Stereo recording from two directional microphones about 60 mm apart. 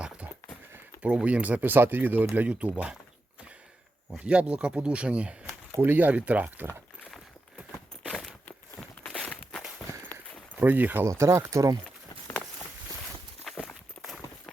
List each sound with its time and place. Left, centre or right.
1.0 s speech: right
4.3 s speech: centre
5.8 s speech: right
7.7 s a sound: centre
8.4 s a sound: left
9.1 s walk: centre
10.1 s walk: left
10.5 s speech: right
11.0 s speech: right
13.4 s walk: centre